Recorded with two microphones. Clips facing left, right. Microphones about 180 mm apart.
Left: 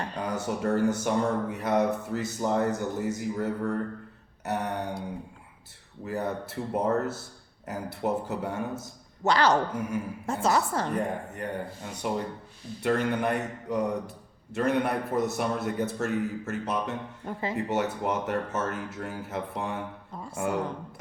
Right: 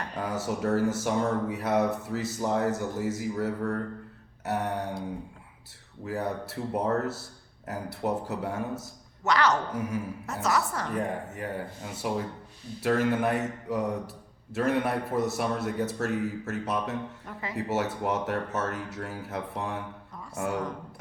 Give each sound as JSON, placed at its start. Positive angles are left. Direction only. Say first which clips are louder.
{"t": 0.2, "sound": "speech", "louder": "right 1 dB", "side_deg": 0}
{"t": 6.1, "sound": "speech", "louder": "even", "side_deg": 0}
{"t": 9.2, "sound": "a woman's voice", "louder": "left 2 dB", "side_deg": 30}
{"t": 9.7, "sound": "speech", "louder": "even", "side_deg": 0}
{"t": 10.4, "sound": "a woman's voice", "louder": "left 2 dB", "side_deg": 30}
{"t": 10.9, "sound": "speech", "louder": "left 1 dB", "side_deg": 0}